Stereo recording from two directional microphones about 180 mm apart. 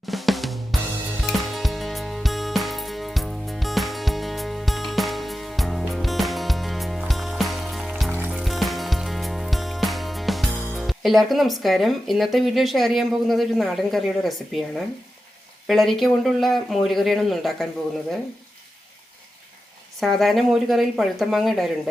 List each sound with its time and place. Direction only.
0.1 s drum kit: centre (ahead or behind)
1.2 s music: centre (ahead or behind)
15.6 s speech: centre (ahead or behind)
20.0 s speech: centre (ahead or behind)